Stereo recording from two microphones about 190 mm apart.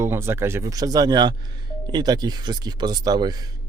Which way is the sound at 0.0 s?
15° right (ahead or behind).